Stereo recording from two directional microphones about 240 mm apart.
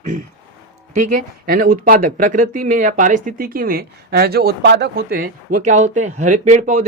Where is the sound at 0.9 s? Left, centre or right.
Right.